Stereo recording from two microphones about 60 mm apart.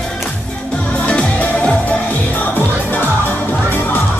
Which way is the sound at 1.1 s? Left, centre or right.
Left.